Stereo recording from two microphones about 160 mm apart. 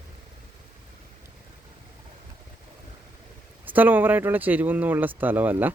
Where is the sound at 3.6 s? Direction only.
10° right (ahead or behind).